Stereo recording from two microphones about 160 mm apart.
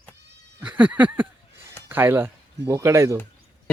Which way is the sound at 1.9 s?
15° right (ahead or behind).